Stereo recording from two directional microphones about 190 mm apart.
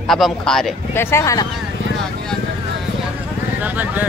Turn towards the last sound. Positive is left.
turn(degrees=-10)  # may be behind; listen again after turning